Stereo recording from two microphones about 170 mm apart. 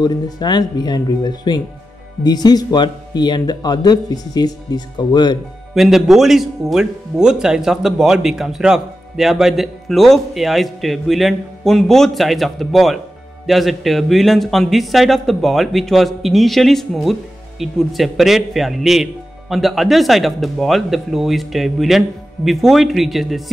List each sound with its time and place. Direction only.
0.0 s speech: 25° left (ahead or behind)
5.8 s speech: centre (ahead or behind)